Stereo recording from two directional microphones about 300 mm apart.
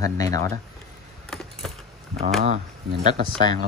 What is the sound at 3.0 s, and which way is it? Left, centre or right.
Speech, right.